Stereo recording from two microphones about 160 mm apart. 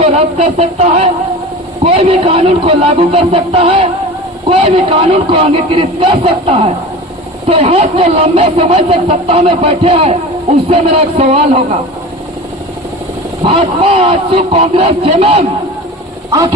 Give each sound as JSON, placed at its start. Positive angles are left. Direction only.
{"t": 0.0, "sound": "speech", "side_deg": -40}
{"t": 13.4, "sound": "speech", "side_deg": -35}
{"t": 16.3, "sound": "speech", "side_deg": -25}